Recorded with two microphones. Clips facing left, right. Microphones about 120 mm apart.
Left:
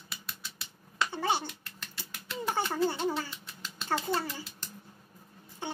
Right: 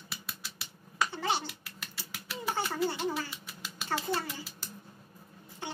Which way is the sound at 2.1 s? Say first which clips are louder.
Left 2 dB; 5° right (ahead or behind).